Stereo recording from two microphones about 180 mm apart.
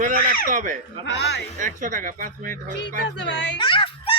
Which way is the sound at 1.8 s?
45° right (ahead or behind).